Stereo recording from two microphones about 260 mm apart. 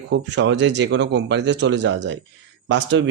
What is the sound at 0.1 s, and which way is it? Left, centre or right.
Speech, right.